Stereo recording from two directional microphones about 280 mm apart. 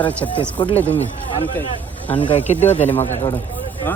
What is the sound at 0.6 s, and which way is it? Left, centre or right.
Speech, centre.